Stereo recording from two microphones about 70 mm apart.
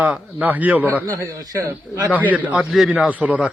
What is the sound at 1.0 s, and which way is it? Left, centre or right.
Speech, right.